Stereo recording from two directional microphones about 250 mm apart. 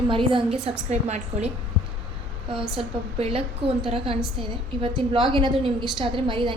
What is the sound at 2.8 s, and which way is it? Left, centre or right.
A woman's voice, right.